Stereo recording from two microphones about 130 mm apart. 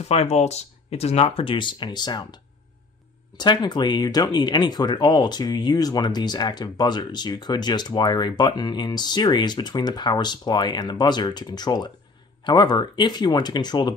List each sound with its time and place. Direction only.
0.0 s speech: 55° left (ahead or behind); by 13.9 s 35° left (ahead or behind)